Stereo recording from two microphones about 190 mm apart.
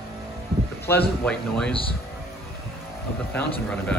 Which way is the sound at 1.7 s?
30° left (ahead or behind).